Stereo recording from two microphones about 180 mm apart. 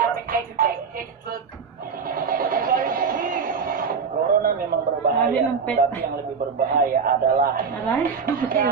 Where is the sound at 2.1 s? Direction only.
50° right (ahead or behind).